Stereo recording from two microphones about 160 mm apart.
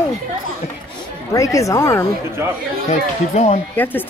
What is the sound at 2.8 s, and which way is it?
Speech, 40° left (ahead or behind).